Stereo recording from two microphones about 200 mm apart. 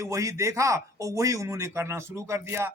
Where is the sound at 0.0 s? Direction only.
15° right (ahead or behind).